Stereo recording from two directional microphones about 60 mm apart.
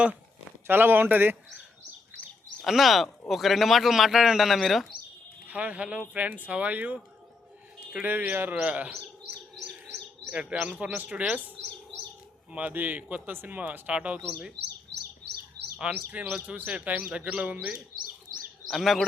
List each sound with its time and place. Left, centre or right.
0.7 s speech: right
2.6 s a man's voice: centre
5.5 s speech: right
8.0 s speech: right
10.2 s speech: right
12.5 s speech: right
16.2 s speech: right
17.1 s speech: centre
18.7 s a man's voice: centre